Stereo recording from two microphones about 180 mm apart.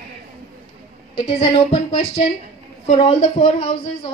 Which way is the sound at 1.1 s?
30° left (ahead or behind).